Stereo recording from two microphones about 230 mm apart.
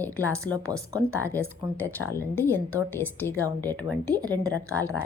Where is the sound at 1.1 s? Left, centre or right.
Centre.